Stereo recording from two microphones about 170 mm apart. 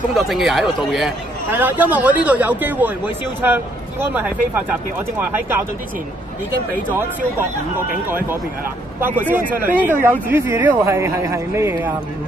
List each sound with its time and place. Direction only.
0.1 s speech: centre (ahead or behind)
4.1 s speech: 10° right (ahead or behind)
9.3 s speech: 10° right (ahead or behind)